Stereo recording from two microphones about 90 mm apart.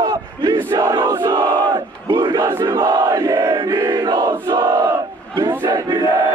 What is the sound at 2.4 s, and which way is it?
Crowd, 30° right (ahead or behind).